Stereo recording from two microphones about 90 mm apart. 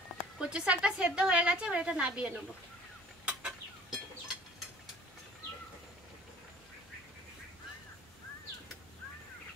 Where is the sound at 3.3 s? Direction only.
10° right (ahead or behind).